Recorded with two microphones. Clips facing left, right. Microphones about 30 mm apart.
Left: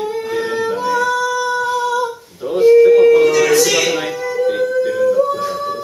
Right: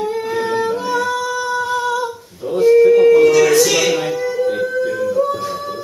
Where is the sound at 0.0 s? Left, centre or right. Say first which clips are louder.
Even; centre.